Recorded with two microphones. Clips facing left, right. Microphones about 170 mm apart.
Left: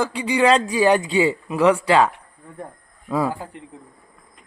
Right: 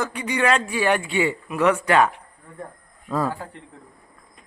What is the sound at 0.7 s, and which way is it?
Speech, 15° left (ahead or behind).